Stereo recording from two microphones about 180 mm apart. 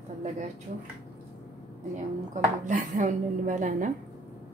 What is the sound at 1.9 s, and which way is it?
Speech, 45° right (ahead or behind).